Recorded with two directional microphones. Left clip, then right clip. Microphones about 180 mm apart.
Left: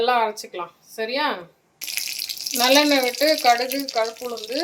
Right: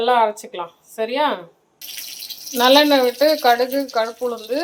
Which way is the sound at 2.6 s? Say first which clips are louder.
Right 4 dB; 10° right (ahead or behind).